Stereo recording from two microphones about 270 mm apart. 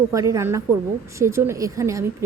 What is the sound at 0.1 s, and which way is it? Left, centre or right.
A woman's voice, centre.